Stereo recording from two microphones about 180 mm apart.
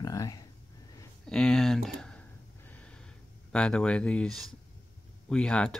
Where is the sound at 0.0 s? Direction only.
20° left (ahead or behind).